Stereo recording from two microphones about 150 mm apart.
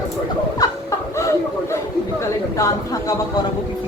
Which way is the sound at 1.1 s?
20° left (ahead or behind).